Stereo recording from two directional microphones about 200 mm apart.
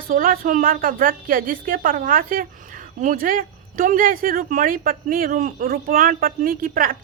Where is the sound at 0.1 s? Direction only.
45° right (ahead or behind).